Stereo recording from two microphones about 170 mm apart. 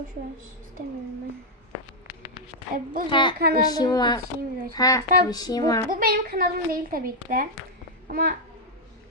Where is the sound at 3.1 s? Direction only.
30° left (ahead or behind).